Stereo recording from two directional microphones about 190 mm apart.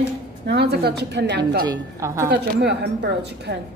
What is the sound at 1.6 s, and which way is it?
Speech, 15° right (ahead or behind).